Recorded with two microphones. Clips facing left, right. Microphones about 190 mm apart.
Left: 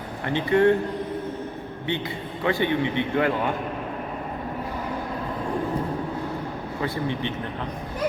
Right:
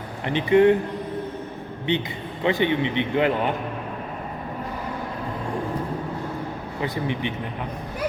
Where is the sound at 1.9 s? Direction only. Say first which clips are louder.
Right 3 dB; 20° right (ahead or behind).